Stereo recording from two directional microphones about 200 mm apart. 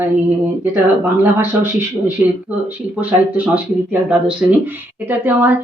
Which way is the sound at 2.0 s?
10° right (ahead or behind).